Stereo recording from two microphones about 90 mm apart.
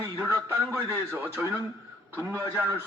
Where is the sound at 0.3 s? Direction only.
25° right (ahead or behind).